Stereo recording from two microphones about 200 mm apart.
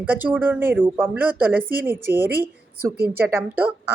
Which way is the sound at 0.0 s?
10° right (ahead or behind).